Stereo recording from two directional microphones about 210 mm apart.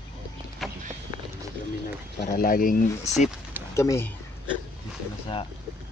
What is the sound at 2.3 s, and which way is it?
Speech, 40° left (ahead or behind).